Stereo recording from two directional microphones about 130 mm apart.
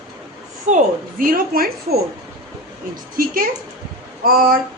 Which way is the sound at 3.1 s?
90° right.